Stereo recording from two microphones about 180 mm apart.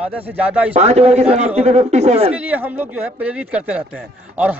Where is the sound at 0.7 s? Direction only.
35° right (ahead or behind).